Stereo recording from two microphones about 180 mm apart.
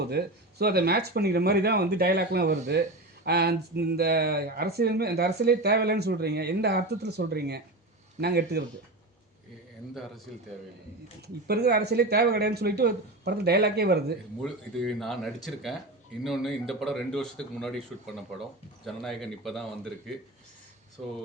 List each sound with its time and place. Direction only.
0.0 s speech: 60° right (ahead or behind)
11.4 s speech: 60° right (ahead or behind)
14.4 s speech: centre (ahead or behind)